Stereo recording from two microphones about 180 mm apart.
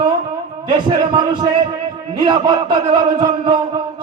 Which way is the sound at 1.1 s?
25° right (ahead or behind).